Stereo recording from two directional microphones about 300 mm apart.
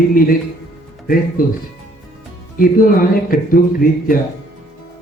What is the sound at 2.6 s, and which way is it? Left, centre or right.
Speech, left.